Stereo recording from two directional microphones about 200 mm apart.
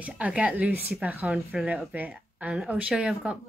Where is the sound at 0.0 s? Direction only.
5° right (ahead or behind).